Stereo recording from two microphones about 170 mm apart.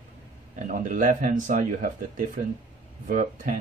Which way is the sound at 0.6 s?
50° right (ahead or behind).